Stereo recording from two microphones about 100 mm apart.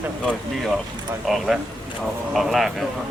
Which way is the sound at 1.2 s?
Centre (ahead or behind).